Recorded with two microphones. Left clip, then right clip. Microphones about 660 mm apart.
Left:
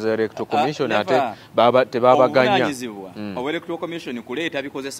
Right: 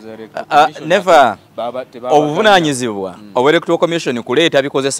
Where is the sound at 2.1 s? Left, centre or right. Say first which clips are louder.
Right 10 dB; right.